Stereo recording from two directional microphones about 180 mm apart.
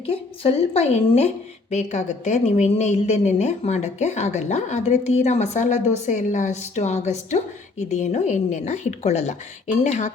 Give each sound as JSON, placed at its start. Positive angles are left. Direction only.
{"t": 0.0, "sound": "a woman's voice", "side_deg": 35}